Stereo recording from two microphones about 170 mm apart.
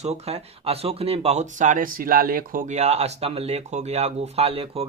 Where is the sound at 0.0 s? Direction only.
40° right (ahead or behind).